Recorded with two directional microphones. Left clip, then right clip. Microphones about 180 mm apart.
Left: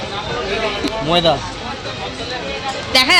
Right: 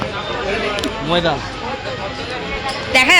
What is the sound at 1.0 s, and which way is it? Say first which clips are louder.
Speech: left 3 dB; 40° left (ahead or behind).